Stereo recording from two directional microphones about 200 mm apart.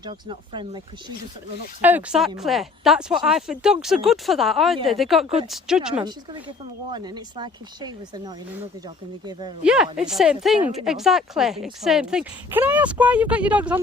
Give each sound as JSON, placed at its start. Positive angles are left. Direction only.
{"t": 0.0, "sound": "speech", "side_deg": -25}
{"t": 1.8, "sound": "speech", "side_deg": -10}
{"t": 6.9, "sound": "speech", "side_deg": -20}
{"t": 9.6, "sound": "speech", "side_deg": -5}